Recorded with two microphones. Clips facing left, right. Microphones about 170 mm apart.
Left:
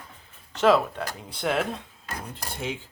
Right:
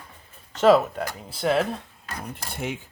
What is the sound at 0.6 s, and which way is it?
Speech, 10° right (ahead or behind).